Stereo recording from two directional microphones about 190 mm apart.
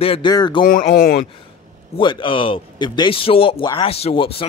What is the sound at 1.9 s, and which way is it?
A man's voice, 25° left (ahead or behind).